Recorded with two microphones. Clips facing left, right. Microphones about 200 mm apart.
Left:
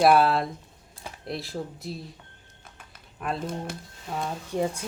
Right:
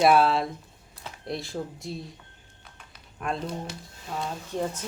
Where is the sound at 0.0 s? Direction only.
Centre (ahead or behind).